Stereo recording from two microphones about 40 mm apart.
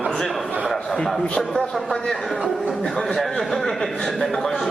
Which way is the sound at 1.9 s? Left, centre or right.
Centre.